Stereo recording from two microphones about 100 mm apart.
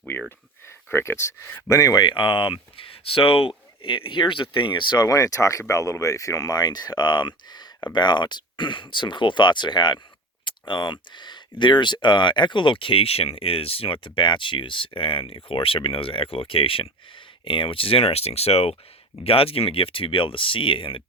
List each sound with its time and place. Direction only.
0.9 s speech: 25° left (ahead or behind)
1.8 s speech: 40° left (ahead or behind)
5.0 s speech: 35° left (ahead or behind); by 18.8 s 90° left
19.2 s speech: 70° left (ahead or behind)